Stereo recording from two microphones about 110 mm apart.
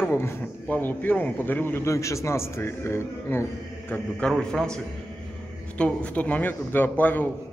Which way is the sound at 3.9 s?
10° left (ahead or behind).